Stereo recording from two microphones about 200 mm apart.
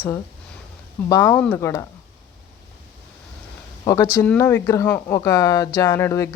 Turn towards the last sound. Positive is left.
turn(degrees=15)  # may be behind; listen again after turning